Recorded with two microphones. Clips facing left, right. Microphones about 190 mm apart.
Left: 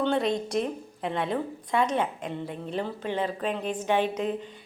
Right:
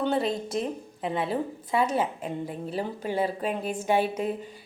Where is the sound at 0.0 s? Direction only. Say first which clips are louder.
Left 1 dB; 5° right (ahead or behind).